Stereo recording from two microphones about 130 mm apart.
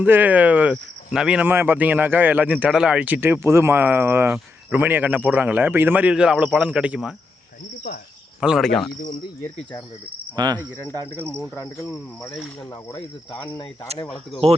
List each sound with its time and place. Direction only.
0.0 s speech: 15° right (ahead or behind)
8.4 s speech: 5° right (ahead or behind)
8.6 s speech: 5° left (ahead or behind)
10.3 s cricket: 30° right (ahead or behind)
11.3 s cricket: 10° left (ahead or behind)
11.5 s speech: 20° left (ahead or behind)